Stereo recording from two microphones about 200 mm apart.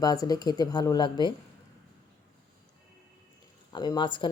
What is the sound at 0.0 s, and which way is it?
A woman's voice, 20° left (ahead or behind).